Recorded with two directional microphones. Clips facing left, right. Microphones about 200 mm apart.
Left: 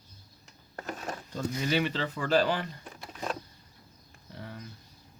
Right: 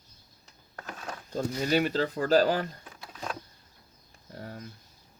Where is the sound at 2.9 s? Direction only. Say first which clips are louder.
Left 2 dB; 5° left (ahead or behind).